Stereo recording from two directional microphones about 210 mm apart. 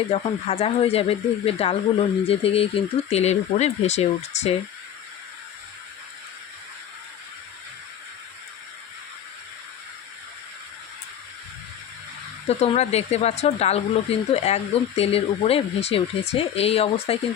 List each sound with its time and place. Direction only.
0.1 s speech: 30° left (ahead or behind)
12.5 s speech: 30° left (ahead or behind)